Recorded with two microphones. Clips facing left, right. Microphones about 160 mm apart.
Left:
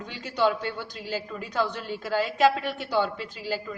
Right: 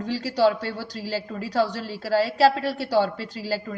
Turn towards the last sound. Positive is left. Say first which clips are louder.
# right 3 dB
turn(degrees=-40)  # may be behind; listen again after turning